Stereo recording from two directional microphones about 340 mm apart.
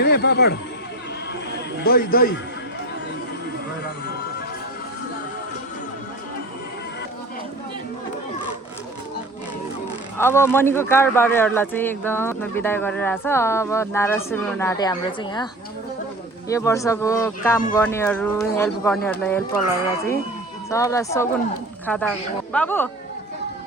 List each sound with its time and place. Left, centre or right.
0.0 s speech: left
1.8 s a man's voice: left
10.2 s speech: centre
16.5 s speech: centre
20.7 s speech: centre